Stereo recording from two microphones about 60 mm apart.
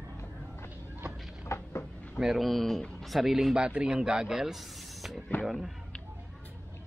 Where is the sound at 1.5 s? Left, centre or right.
Left.